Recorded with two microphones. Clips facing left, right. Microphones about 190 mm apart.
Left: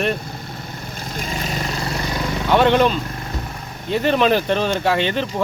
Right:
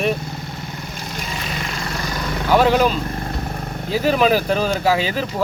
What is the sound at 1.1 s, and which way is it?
Vehicle, 35° left (ahead or behind).